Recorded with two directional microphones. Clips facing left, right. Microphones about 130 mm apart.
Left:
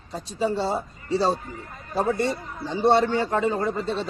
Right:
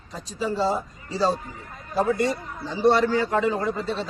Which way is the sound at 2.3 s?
Centre (ahead or behind).